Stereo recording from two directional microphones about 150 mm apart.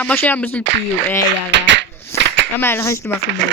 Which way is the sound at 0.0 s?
15° left (ahead or behind).